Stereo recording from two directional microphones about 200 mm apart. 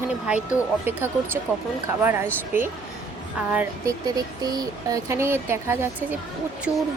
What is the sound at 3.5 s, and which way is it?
A woman's voice, 10° right (ahead or behind).